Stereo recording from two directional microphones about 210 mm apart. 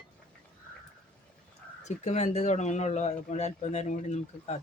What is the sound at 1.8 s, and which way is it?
Speech, 30° left (ahead or behind).